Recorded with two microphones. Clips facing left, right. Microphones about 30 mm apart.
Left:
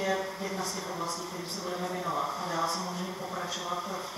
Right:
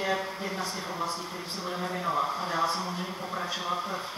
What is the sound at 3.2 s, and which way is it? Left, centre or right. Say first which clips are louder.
Speech: right 4 dB; centre.